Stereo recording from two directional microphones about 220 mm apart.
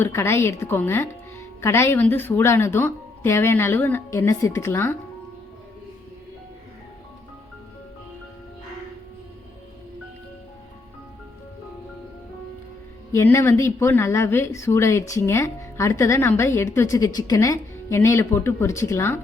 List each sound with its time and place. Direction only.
0.0 s speech: 10° left (ahead or behind)
13.1 s speech: 10° left (ahead or behind)